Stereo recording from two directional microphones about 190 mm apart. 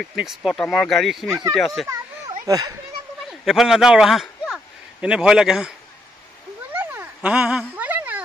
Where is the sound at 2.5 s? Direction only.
20° right (ahead or behind).